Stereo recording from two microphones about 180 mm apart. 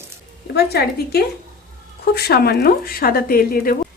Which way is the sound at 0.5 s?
60° left (ahead or behind).